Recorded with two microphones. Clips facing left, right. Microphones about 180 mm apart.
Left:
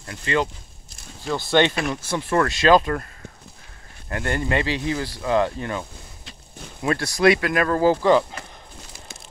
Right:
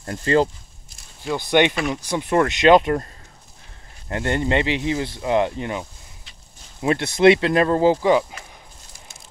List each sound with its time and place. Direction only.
0.0 s speech: 40° right (ahead or behind)
1.2 s speech: 15° right (ahead or behind)
4.1 s speech: 25° right (ahead or behind)
8.9 s a sound: 65° left (ahead or behind)